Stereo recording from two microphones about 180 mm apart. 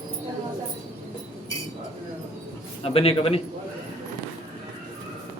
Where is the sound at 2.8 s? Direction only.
30° left (ahead or behind).